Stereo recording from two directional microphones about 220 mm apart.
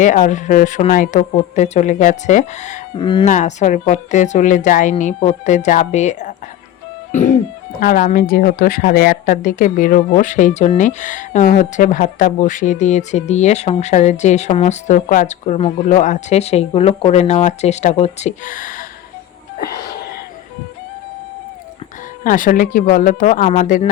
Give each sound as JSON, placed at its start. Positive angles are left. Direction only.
{"t": 0.0, "sound": "speech", "side_deg": 35}
{"t": 3.0, "sound": "speech", "side_deg": 20}
{"t": 3.2, "sound": "speech", "side_deg": 35}
{"t": 7.1, "sound": "music", "side_deg": 35}
{"t": 7.8, "sound": "speech", "side_deg": 40}
{"t": 22.2, "sound": "speech", "side_deg": 35}